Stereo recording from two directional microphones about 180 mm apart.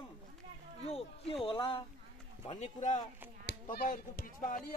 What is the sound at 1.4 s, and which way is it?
Speech, 30° left (ahead or behind).